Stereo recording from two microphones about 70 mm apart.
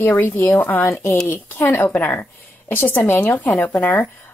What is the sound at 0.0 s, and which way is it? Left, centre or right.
A woman's voice, left.